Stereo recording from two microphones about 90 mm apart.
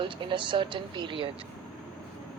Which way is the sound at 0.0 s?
65° right (ahead or behind).